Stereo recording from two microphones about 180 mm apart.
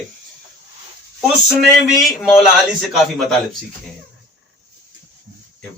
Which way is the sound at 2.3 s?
Centre (ahead or behind).